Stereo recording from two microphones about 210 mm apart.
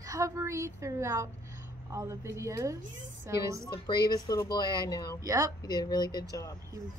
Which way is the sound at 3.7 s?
20° left (ahead or behind).